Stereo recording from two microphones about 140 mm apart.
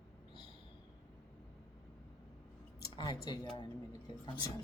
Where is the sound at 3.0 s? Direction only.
30° left (ahead or behind).